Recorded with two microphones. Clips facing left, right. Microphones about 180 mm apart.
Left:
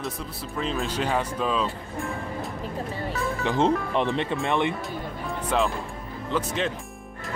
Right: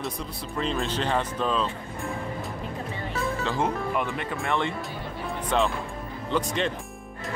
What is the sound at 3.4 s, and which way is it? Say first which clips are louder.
Speech: left 7 dB; 25° left (ahead or behind).